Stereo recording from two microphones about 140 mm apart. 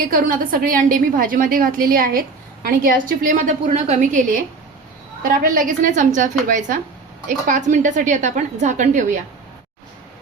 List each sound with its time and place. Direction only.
0.1 s a woman's voice: 85° right; by 4.4 s 60° right (ahead or behind)
5.2 s a woman's voice: 80° right; by 9.1 s 65° right (ahead or behind)